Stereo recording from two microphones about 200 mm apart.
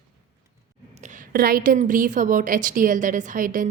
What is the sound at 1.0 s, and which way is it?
A woman's voice, 45° right (ahead or behind).